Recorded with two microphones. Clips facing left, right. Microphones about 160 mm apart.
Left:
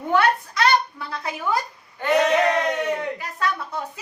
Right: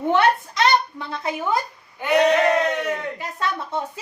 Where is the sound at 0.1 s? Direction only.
25° right (ahead or behind).